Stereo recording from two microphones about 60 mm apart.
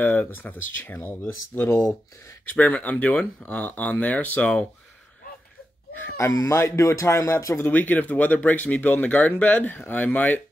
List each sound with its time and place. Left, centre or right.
0.0 s speech: left
2.4 s speech: left
6.1 s speech: left
6.6 s speech: left
7.1 s speech: left
7.6 s speech: left